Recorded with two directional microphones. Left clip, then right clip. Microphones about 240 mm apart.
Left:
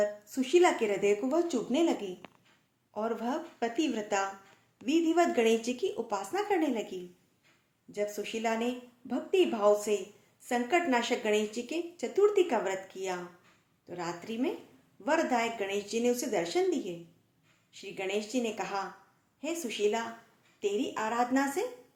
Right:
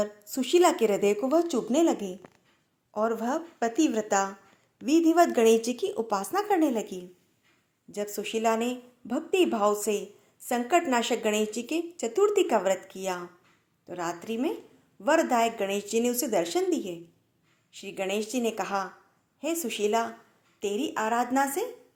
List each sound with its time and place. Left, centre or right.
0.0 s a woman's voice: right